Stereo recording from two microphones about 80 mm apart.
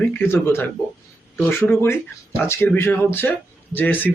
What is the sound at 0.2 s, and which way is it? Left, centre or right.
Speech, left.